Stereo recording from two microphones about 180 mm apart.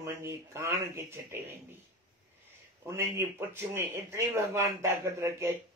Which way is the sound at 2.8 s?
15° right (ahead or behind).